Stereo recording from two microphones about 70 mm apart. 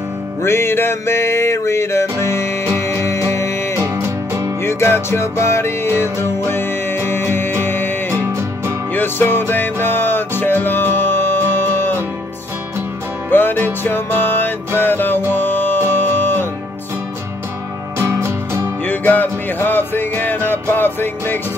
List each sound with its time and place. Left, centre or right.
0.4 s music: left
3.8 s music: right
4.6 s music: left
8.1 s music: right
8.9 s music: left
13.3 s music: left
17.9 s music: right
18.9 s music: left